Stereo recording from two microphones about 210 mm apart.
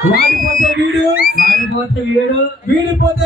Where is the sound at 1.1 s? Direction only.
45° left (ahead or behind).